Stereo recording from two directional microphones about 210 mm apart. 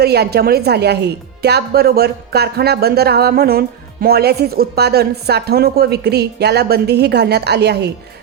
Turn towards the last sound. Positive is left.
turn(degrees=-50)  # may be behind; listen again after turning